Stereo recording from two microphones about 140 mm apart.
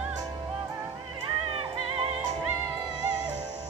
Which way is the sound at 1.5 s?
45° right (ahead or behind).